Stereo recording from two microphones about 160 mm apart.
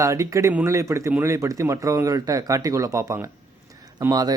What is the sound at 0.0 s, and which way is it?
Speech, 20° right (ahead or behind).